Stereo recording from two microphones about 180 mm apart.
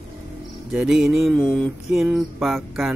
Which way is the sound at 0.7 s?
Centre (ahead or behind).